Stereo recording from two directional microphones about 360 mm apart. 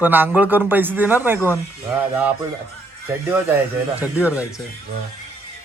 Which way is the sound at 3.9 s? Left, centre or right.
Centre.